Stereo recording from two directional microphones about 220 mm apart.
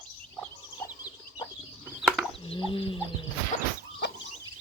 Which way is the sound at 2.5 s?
25° left (ahead or behind).